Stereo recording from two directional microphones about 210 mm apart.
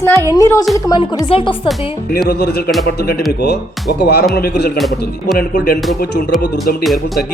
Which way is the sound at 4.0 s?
50° left (ahead or behind).